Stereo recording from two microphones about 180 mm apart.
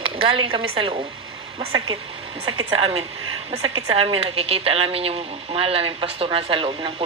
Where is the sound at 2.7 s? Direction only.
35° right (ahead or behind).